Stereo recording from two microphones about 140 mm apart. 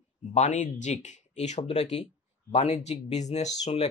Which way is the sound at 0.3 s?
55° left (ahead or behind).